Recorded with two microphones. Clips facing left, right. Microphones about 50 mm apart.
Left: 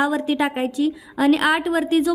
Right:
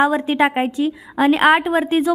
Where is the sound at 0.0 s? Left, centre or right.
Right.